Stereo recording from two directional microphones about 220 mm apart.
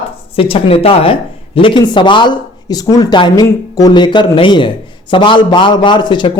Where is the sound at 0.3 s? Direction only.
25° left (ahead or behind).